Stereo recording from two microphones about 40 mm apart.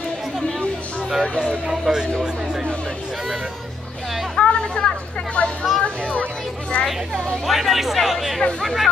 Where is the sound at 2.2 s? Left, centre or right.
Centre.